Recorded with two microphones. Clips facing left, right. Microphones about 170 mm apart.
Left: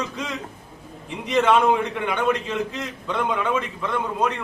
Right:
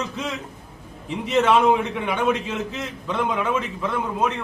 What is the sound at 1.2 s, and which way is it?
A man's voice, 5° right (ahead or behind).